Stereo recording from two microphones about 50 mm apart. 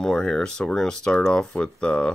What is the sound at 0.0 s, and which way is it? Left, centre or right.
Speech, centre.